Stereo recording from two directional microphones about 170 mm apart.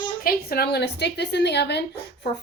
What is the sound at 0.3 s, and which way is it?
A woman's voice, 65° left (ahead or behind).